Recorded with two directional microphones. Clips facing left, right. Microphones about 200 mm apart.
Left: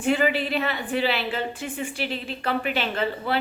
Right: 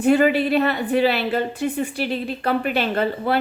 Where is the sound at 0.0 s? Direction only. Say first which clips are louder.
Right 6 dB; 40° right (ahead or behind).